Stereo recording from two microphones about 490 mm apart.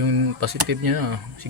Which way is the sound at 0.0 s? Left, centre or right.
Right.